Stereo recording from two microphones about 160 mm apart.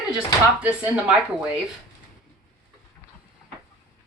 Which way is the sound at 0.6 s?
10° right (ahead or behind).